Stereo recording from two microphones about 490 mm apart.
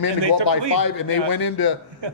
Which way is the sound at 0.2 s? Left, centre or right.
Right.